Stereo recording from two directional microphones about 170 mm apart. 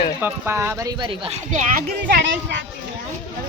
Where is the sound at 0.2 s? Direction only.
15° right (ahead or behind); by 1.4 s 30° right (ahead or behind).